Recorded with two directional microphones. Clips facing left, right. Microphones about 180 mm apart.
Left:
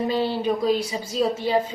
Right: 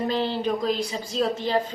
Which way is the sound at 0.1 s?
10° left (ahead or behind).